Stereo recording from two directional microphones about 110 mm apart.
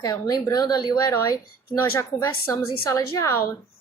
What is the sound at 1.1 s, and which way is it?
Speech, 25° left (ahead or behind).